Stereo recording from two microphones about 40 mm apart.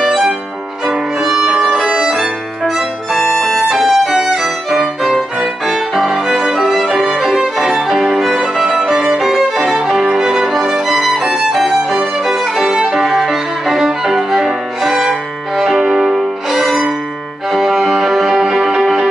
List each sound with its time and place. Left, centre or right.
0.8 s violin: centre
2.0 s music: centre
3.2 s music: centre
3.6 s music: centre
5.4 s violin: centre
7.7 s violin: centre
9.8 s music: centre
10.9 s music: centre
11.5 s violin: centre
12.9 s music: centre
15.7 s music: centre
16.4 s music: centre
18.3 s music: centre
18.7 s music: centre